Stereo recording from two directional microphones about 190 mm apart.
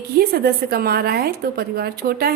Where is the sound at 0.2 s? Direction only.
50° right (ahead or behind).